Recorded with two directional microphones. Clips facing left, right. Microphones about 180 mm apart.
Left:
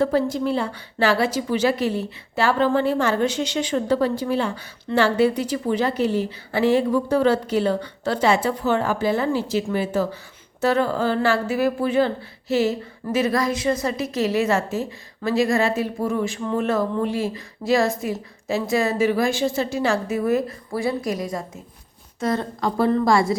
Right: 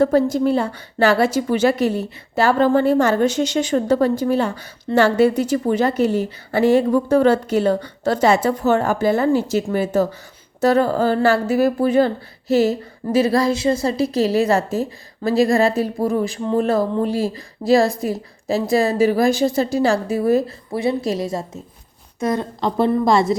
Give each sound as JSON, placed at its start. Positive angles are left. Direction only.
{"t": 0.0, "sound": "a woman's voice", "side_deg": -45}